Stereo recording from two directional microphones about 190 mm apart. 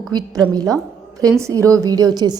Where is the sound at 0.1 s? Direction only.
20° right (ahead or behind).